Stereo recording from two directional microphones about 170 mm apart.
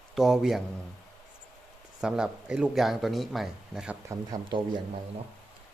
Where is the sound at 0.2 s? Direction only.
Centre (ahead or behind).